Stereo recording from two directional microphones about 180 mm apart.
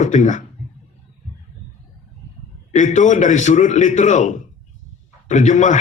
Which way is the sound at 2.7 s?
45° left (ahead or behind).